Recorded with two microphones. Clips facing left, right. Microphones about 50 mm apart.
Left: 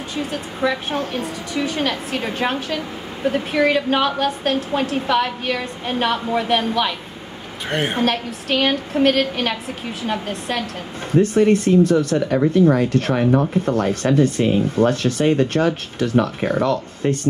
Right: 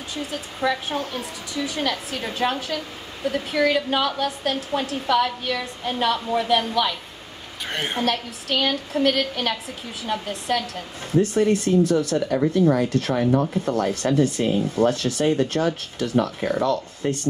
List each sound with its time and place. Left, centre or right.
0.1 s a woman's voice: left
7.6 s a woman's voice: left
8.0 s a woman's voice: left